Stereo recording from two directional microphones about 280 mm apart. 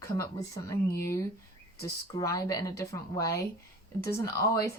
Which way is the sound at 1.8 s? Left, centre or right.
Centre.